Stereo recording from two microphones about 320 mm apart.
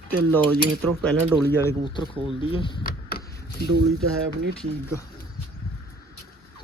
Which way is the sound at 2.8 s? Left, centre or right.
Left.